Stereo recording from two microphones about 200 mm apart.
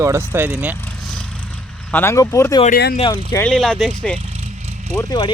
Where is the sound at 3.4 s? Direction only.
5° left (ahead or behind).